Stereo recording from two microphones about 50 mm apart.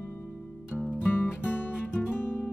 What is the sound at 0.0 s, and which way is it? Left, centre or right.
Music, left.